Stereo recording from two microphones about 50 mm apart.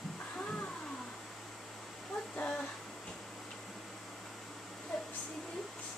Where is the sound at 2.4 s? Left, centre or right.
Left.